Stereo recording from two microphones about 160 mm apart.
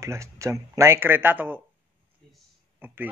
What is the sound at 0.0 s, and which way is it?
Speech, 20° right (ahead or behind).